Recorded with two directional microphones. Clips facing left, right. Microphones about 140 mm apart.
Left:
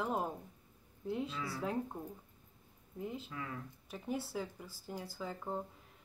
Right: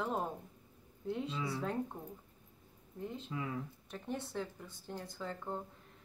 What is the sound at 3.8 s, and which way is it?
Speech, 5° left (ahead or behind).